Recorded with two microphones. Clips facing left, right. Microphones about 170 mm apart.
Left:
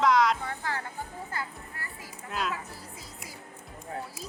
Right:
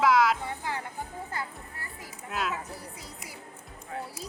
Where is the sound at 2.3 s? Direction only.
Centre (ahead or behind).